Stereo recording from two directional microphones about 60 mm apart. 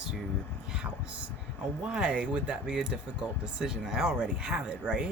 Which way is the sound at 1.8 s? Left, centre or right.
Centre.